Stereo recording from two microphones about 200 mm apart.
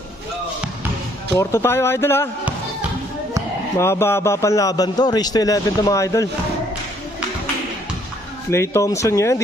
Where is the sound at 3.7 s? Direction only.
15° left (ahead or behind).